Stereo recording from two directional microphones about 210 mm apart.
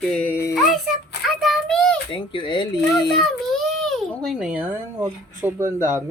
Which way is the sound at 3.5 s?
Centre (ahead or behind).